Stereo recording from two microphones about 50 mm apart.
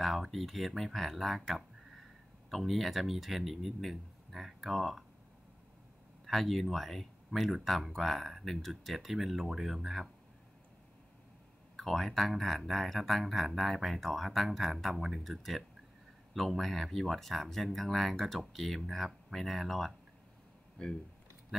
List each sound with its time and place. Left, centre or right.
0.0 s speech: centre
6.2 s speech: centre
11.7 s speech: centre
20.8 s speech: centre